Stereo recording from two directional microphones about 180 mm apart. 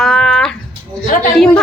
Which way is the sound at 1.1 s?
45° left (ahead or behind).